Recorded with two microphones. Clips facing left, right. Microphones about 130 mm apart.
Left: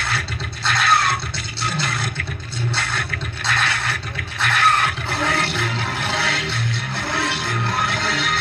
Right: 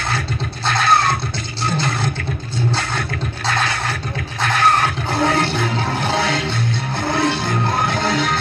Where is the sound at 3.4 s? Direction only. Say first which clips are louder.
Right 2 dB; 40° right (ahead or behind).